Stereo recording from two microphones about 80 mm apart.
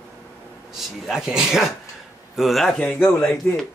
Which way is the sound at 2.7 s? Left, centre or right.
Centre.